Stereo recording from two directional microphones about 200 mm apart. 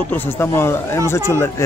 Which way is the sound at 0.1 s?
10° left (ahead or behind).